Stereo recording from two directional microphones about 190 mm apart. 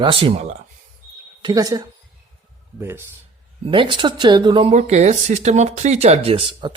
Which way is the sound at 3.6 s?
25° right (ahead or behind).